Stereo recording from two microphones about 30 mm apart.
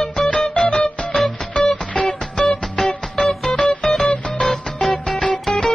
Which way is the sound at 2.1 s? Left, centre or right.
Centre.